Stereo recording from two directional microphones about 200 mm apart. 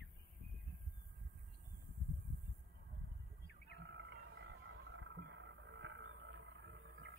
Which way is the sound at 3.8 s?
65° right (ahead or behind).